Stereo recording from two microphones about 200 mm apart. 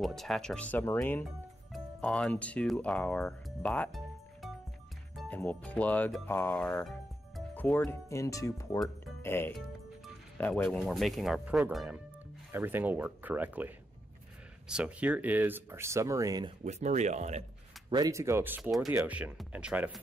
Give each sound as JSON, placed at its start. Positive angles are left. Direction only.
{"t": 0.0, "sound": "speech", "side_deg": 0}
{"t": 16.6, "sound": "speech", "side_deg": -35}
{"t": 17.8, "sound": "speech", "side_deg": -20}